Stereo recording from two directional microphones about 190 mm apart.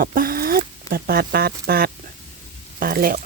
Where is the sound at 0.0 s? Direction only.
50° right (ahead or behind).